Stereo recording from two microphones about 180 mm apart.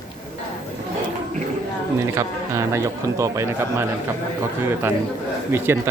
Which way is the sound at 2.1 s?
15° right (ahead or behind).